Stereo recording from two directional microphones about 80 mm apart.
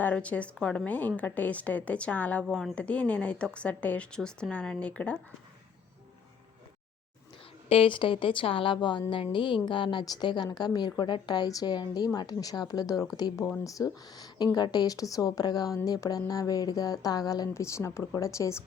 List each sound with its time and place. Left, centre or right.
0.0 s a woman's voice: centre
2.5 s speech: centre
2.7 s speech: centre
7.9 s a woman's voice: left
17.5 s speech: left